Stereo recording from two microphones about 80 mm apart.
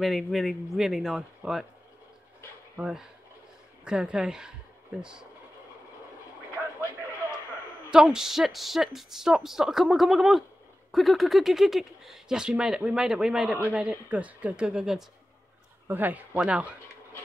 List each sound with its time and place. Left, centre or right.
0.0 s speech: centre
2.8 s speech: centre
7.9 s speech: centre
15.9 s speech: right